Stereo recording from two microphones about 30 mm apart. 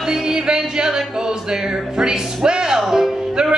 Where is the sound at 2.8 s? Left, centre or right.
Centre.